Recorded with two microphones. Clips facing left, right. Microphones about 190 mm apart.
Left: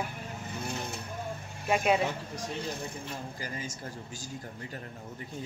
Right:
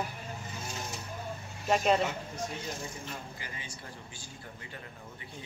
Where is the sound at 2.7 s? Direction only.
60° left (ahead or behind).